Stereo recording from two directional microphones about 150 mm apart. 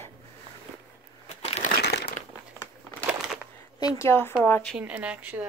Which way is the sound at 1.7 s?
90° left.